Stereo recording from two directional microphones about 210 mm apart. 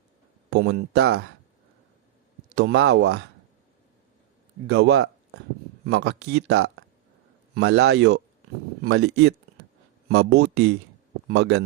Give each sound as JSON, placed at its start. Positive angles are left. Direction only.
{"t": 0.5, "sound": "speech", "side_deg": -50}
{"t": 2.6, "sound": "speech", "side_deg": -55}
{"t": 4.6, "sound": "speech", "side_deg": -55}